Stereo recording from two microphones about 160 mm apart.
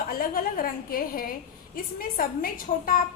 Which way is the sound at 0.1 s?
65° left (ahead or behind).